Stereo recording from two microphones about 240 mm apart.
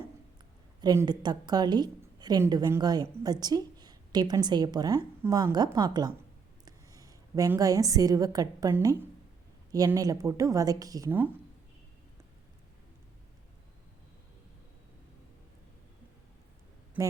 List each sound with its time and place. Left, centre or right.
0.8 s a woman's voice: centre